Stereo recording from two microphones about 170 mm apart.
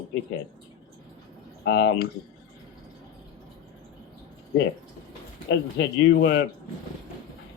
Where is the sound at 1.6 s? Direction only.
90° left.